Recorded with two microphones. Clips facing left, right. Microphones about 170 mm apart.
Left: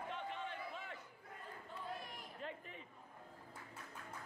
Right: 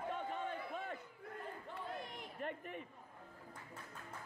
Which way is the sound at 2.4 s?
55° right (ahead or behind).